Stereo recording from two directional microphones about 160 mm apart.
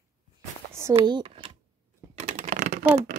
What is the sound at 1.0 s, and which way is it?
Speech, 30° right (ahead or behind).